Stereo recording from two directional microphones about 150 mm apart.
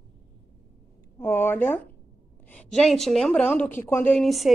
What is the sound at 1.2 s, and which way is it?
A woman's voice, 15° left (ahead or behind).